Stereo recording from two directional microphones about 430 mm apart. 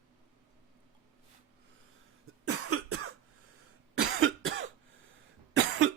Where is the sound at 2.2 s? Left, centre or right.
Right.